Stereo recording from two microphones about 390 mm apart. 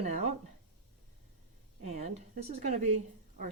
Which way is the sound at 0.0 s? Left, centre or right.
Centre.